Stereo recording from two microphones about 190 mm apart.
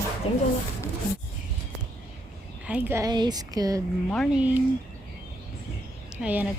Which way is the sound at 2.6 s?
10° right (ahead or behind).